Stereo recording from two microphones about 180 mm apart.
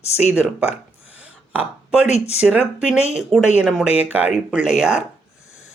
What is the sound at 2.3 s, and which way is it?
Speech, 5° right (ahead or behind).